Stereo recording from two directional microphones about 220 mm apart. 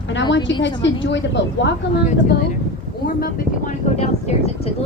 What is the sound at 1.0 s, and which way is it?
Speech, 55° left (ahead or behind).